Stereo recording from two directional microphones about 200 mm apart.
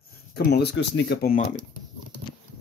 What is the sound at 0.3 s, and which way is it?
Speech, 55° left (ahead or behind).